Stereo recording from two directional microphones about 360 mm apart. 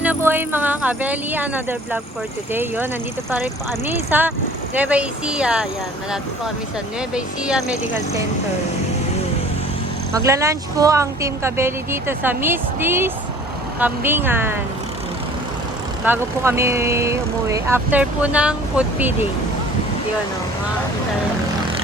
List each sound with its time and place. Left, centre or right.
0.0 s speech: centre
7.1 s speech: centre
10.2 s speech: centre
16.0 s speech: centre